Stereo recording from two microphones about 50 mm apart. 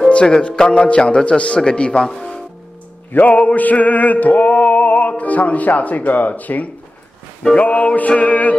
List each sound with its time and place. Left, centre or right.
0.1 s a man's voice: left
3.1 s music: left